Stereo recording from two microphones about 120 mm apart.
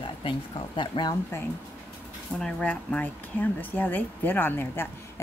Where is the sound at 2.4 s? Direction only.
10° left (ahead or behind).